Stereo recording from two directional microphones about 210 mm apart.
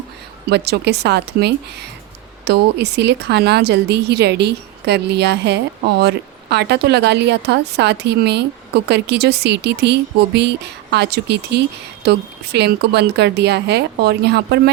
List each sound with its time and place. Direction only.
0.5 s speech: 50° right (ahead or behind)